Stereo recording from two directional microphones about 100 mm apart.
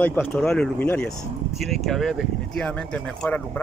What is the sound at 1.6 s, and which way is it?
Speech, centre (ahead or behind).